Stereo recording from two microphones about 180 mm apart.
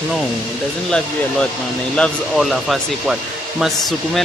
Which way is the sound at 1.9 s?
5° left (ahead or behind).